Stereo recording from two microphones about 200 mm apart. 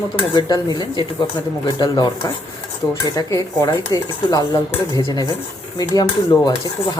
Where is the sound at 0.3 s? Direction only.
20° left (ahead or behind).